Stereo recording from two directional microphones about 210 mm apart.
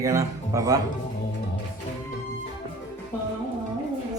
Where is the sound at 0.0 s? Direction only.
15° right (ahead or behind).